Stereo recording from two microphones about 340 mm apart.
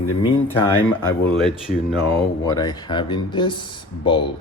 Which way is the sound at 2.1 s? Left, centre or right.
Centre.